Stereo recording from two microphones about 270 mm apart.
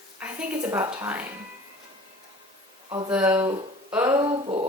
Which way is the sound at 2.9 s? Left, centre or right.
Centre.